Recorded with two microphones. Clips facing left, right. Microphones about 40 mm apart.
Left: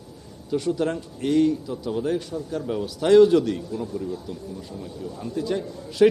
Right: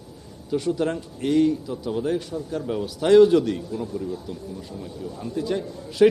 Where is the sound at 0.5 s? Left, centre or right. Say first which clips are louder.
Even; centre.